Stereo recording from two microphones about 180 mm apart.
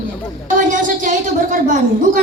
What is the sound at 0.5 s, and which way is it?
A woman's voice, 45° right (ahead or behind).